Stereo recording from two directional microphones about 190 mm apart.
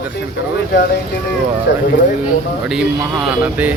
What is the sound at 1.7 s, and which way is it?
Speech, 65° left (ahead or behind).